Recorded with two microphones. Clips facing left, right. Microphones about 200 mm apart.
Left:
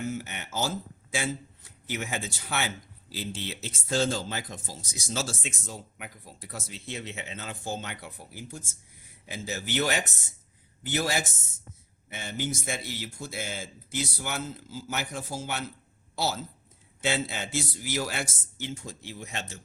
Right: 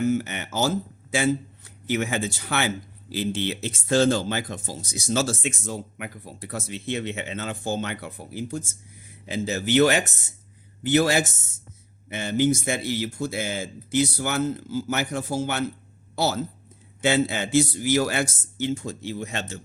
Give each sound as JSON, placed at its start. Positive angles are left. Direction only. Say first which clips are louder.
{"t": 0.1, "sound": "a man's voice", "louder": "right 9 dB", "side_deg": -75}